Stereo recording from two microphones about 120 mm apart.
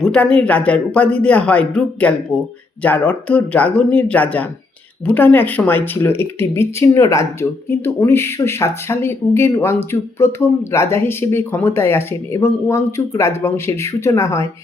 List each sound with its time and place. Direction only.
0.0 s speech: 10° left (ahead or behind); by 14.4 s 25° left (ahead or behind)